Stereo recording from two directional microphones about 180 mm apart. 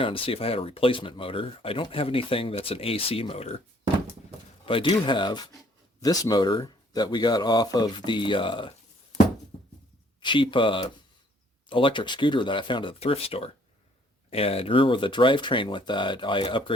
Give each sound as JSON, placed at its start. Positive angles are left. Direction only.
{"t": 0.0, "sound": "speech", "side_deg": 30}
{"t": 4.6, "sound": "speech", "side_deg": 30}
{"t": 10.2, "sound": "speech", "side_deg": 25}